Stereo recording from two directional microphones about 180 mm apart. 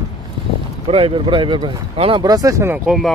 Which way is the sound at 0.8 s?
35° right (ahead or behind).